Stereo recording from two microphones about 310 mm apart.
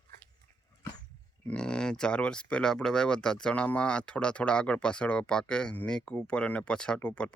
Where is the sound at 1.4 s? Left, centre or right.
Centre.